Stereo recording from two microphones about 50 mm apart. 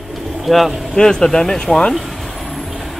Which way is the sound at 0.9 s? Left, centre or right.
Centre.